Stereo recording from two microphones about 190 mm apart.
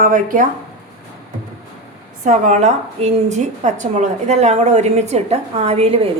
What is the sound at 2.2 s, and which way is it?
A woman's voice, 40° right (ahead or behind).